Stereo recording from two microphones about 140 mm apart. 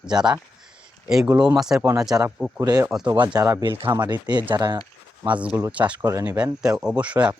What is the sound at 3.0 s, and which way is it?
Speech, 30° right (ahead or behind).